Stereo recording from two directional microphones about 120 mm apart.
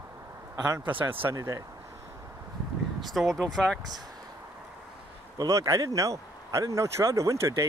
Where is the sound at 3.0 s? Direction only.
Centre (ahead or behind).